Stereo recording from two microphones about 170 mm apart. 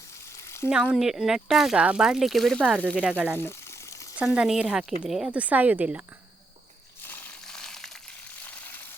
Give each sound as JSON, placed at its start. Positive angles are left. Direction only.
{"t": 0.7, "sound": "speech", "side_deg": -5}
{"t": 3.0, "sound": "speech", "side_deg": -10}
{"t": 7.1, "sound": "frying", "side_deg": 5}
{"t": 8.4, "sound": "a sound", "side_deg": 10}